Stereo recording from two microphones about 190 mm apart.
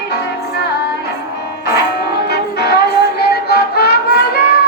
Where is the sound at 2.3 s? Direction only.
60° left (ahead or behind).